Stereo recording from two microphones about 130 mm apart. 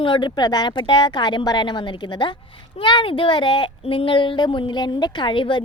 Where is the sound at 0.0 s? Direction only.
40° left (ahead or behind).